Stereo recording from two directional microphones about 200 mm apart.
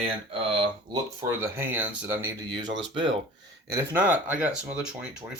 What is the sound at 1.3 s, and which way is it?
Speech, 10° right (ahead or behind).